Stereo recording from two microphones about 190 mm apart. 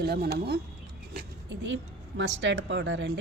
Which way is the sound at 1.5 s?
75° right (ahead or behind).